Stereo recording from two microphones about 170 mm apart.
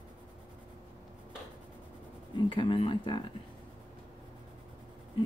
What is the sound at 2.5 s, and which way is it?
Speech, 30° left (ahead or behind).